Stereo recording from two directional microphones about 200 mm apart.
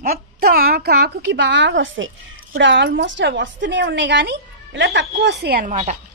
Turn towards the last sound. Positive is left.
turn(degrees=-35)  # may be behind; listen again after turning